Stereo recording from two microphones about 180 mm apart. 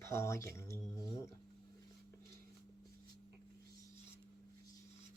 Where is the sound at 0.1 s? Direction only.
15° left (ahead or behind).